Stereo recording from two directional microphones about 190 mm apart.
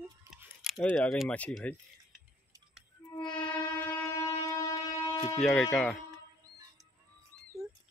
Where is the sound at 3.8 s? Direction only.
15° left (ahead or behind).